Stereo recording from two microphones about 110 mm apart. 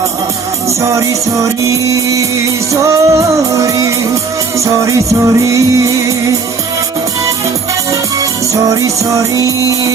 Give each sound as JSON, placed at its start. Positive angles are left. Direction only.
{"t": 0.8, "sound": "music", "side_deg": -30}
{"t": 8.2, "sound": "music", "side_deg": -30}